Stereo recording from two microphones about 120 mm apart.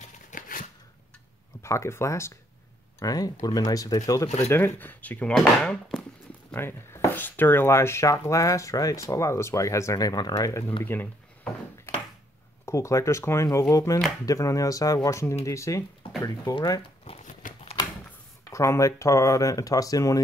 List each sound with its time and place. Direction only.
0.3 s shuffling cards: 90° left
1.6 s speech: 25° left (ahead or behind)
4.5 s speech: 20° left (ahead or behind)
5.6 s speech: 5° left (ahead or behind)
6.5 s speech: 20° left (ahead or behind)
10.8 s speech: 15° left (ahead or behind)
12.6 s speech: 25° left (ahead or behind)
17.2 s biting: 90° left
18.4 s speech: 25° left (ahead or behind)